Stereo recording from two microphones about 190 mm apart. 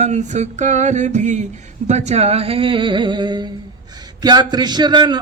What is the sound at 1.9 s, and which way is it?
A man's voice, 35° right (ahead or behind).